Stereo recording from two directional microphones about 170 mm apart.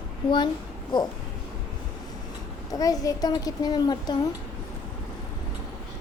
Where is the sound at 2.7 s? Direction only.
20° left (ahead or behind).